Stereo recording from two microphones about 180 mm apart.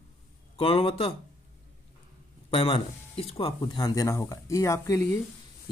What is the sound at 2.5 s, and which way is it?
Speech, 30° left (ahead or behind).